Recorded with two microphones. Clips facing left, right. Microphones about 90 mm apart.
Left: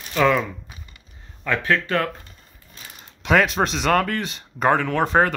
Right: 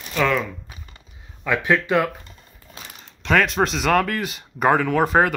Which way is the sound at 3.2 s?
5° left (ahead or behind).